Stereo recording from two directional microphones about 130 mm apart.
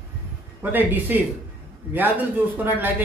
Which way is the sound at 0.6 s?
15° right (ahead or behind).